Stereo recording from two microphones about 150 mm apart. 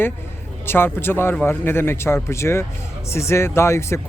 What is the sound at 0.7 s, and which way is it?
A man's voice, 15° left (ahead or behind).